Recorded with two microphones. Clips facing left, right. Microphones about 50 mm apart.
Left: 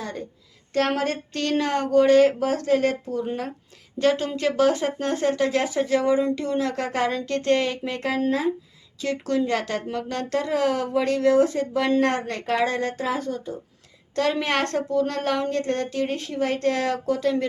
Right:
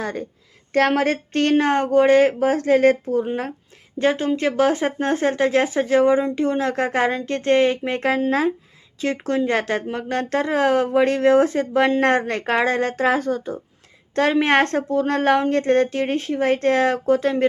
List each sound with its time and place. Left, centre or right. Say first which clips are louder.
0.0 s a woman's voice: right 5 dB; right
3.9 s speech: right 2 dB; right
8.3 s speech: right 3 dB; right
9.0 s speech: right 3 dB; right
14.2 s speech: right 6 dB; right